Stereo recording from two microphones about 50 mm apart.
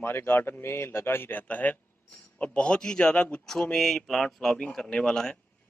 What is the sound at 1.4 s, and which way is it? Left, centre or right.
A man's voice, left.